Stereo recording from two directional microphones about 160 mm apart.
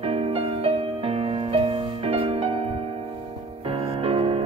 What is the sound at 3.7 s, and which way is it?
Music, 35° right (ahead or behind).